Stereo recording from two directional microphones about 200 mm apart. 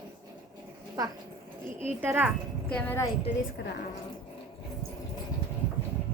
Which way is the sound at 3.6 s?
55° left (ahead or behind).